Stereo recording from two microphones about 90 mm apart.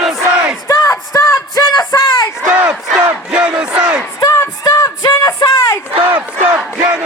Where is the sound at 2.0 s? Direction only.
50° left (ahead or behind).